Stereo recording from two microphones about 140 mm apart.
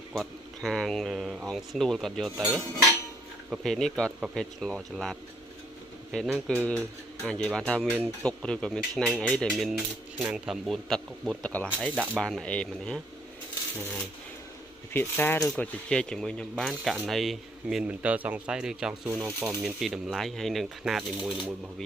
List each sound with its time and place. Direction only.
0.1 s speech: centre (ahead or behind)
14.9 s speech: 15° left (ahead or behind); by 19.1 s 5° right (ahead or behind)
19.1 s speech: 20° right (ahead or behind)
19.5 s speech: centre (ahead or behind)